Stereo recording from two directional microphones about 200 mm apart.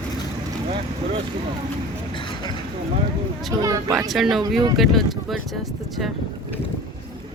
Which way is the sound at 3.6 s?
15° right (ahead or behind).